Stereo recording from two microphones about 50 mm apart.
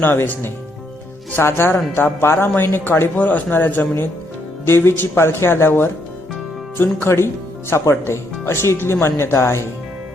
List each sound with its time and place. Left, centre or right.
0.0 s speech: left
3.2 s a man's voice: left
4.6 s speech: left